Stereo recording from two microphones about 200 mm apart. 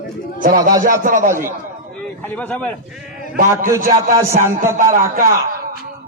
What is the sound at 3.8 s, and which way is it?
A man's voice, 45° right (ahead or behind).